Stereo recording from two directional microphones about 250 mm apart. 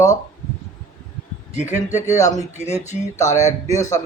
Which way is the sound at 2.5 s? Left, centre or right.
Left.